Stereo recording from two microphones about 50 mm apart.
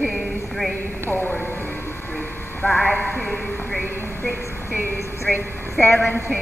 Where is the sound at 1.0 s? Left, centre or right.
Left.